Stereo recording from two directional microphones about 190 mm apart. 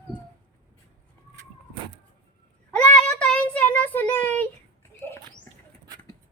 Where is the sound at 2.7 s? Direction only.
5° left (ahead or behind).